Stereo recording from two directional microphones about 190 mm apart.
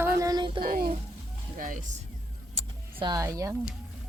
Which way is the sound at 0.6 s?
50° right (ahead or behind).